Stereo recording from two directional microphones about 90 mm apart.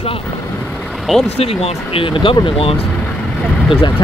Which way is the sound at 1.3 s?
90° left.